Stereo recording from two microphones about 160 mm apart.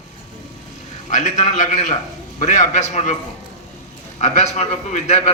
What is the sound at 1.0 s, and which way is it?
A man's voice, 50° left (ahead or behind).